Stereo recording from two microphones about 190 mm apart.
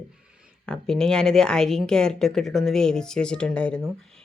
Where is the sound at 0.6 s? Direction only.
5° left (ahead or behind).